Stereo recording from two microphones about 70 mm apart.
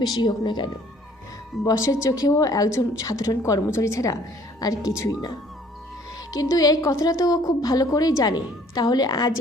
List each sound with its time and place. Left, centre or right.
0.0 s speech: left
1.6 s a woman's voice: left
4.6 s a woman's voice: left
6.3 s a woman's voice: left